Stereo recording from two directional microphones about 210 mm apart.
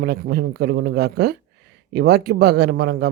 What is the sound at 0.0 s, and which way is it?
A man's voice, 50° right (ahead or behind).